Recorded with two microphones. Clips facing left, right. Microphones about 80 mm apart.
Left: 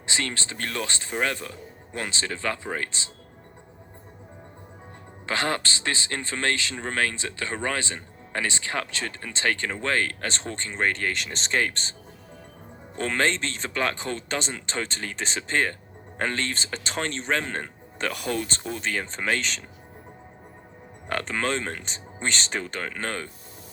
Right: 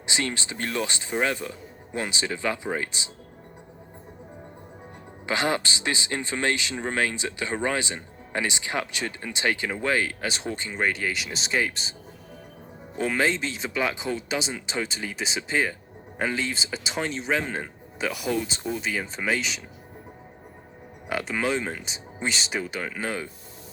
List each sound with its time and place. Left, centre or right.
0.0 s a man's voice: centre
5.2 s a man's voice: centre
13.0 s a man's voice: centre
21.1 s a man's voice: centre